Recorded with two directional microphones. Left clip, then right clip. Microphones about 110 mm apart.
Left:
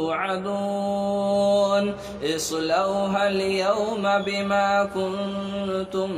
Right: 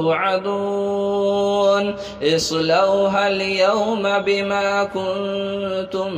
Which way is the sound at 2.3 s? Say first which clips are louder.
Right 6 dB; 35° right (ahead or behind).